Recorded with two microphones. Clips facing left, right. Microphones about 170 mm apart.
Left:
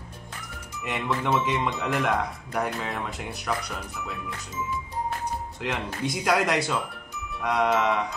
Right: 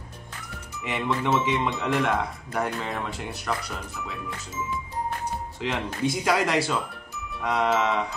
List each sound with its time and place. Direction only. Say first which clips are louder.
0.8 s a man's voice: right 1 dB; centre (ahead or behind)
5.6 s a man's voice: right 3 dB; 5° left (ahead or behind)